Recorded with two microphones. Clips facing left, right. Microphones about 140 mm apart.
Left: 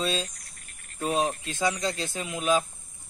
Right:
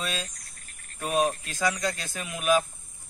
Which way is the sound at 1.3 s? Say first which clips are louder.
Even; 25° left (ahead or behind).